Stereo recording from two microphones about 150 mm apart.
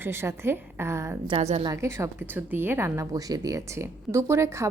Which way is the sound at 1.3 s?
45° right (ahead or behind).